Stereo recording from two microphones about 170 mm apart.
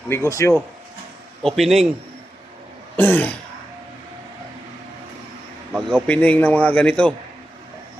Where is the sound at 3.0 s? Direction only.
10° left (ahead or behind).